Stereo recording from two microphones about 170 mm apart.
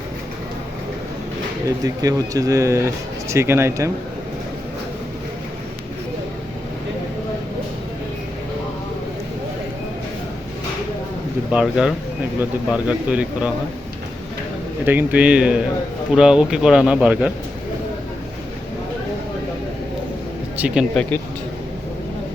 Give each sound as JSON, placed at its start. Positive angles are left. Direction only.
{"t": 1.6, "sound": "speech", "side_deg": -20}
{"t": 11.5, "sound": "speech", "side_deg": -5}
{"t": 14.8, "sound": "speech", "side_deg": -10}
{"t": 20.6, "sound": "speech", "side_deg": -5}
{"t": 20.9, "sound": "speech", "side_deg": 5}